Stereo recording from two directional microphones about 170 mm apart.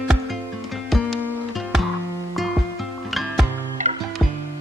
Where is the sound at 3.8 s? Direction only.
45° right (ahead or behind).